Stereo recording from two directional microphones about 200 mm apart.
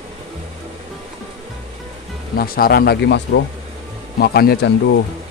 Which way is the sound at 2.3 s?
45° left (ahead or behind).